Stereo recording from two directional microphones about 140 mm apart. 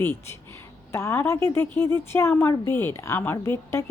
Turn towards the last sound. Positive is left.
turn(degrees=20)  # may be behind; listen again after turning